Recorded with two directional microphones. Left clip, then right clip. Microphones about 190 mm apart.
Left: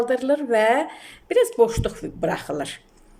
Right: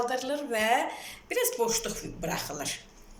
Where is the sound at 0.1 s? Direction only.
65° left (ahead or behind).